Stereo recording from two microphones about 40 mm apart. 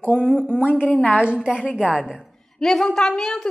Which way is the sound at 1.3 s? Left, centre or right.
Centre.